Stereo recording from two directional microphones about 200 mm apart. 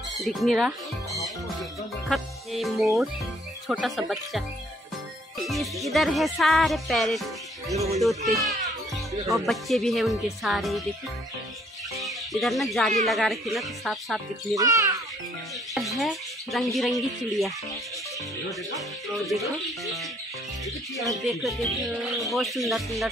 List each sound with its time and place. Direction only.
0.2 s music: centre (ahead or behind)
11.9 s music: centre (ahead or behind)
14.5 s a child's voice: 15° right (ahead or behind)
15.7 s speech: centre (ahead or behind)
18.8 s music: centre (ahead or behind)
21.1 s music: centre (ahead or behind)